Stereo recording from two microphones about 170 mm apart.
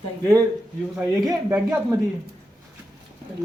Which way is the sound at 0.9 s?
5° right (ahead or behind).